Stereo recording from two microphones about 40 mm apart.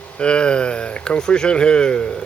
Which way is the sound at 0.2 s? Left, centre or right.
Left.